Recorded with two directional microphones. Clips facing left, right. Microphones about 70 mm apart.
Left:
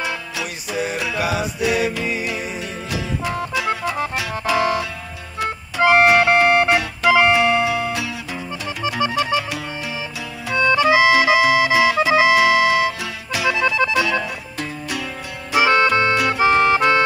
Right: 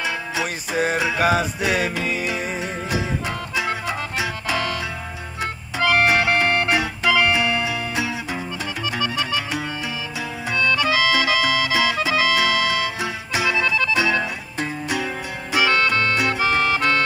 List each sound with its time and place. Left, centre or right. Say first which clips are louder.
0.0 s music: right 1 dB; right
1.2 s music: right 1 dB; right
4.6 s music: left 5 dB; left
7.9 s music: right 1 dB; right
9.0 s music: left 6 dB; left
10.5 s music: left 5 dB; left
13.0 s music: right 1 dB; right
13.5 s music: left 4 dB; left
14.6 s music: right 3 dB; right
15.5 s music: left 4 dB; left